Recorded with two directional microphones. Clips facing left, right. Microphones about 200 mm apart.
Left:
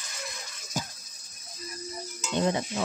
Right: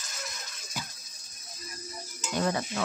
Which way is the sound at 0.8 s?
45° left (ahead or behind).